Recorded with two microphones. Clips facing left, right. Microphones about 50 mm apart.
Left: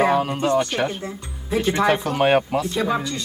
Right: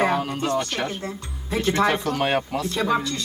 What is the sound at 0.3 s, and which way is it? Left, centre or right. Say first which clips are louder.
Speech: left 4 dB; left.